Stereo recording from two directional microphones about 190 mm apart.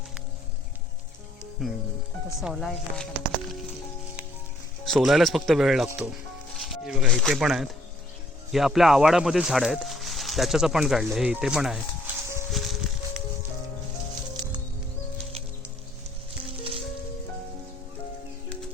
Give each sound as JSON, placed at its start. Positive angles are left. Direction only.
{"t": 1.6, "sound": "speech", "side_deg": 0}
{"t": 4.9, "sound": "speech", "side_deg": 0}
{"t": 12.5, "sound": "music", "side_deg": 0}
{"t": 16.5, "sound": "music", "side_deg": -30}